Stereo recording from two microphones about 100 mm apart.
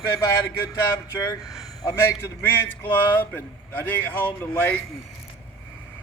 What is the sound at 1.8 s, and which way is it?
A man's voice, 25° left (ahead or behind).